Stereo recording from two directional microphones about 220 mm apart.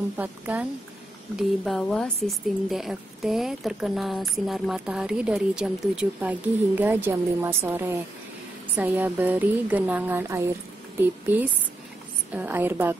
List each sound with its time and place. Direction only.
0.2 s a woman's voice: 5° right (ahead or behind)